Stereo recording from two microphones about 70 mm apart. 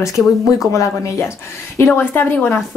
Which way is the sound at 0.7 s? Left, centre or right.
Left.